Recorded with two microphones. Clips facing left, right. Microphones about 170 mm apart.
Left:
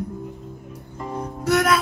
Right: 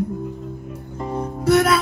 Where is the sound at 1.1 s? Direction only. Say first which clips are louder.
Right 4 dB; 30° right (ahead or behind).